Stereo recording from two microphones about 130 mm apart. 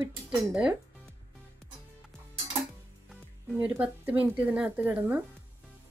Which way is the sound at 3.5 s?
10° right (ahead or behind).